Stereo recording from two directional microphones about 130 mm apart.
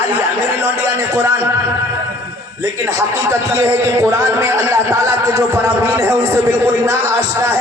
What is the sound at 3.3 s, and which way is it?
A man's voice, 25° right (ahead or behind).